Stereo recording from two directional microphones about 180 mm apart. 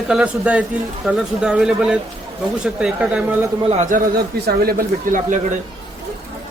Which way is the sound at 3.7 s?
45° right (ahead or behind).